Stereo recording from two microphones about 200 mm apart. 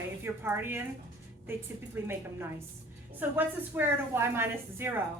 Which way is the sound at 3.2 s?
10° right (ahead or behind).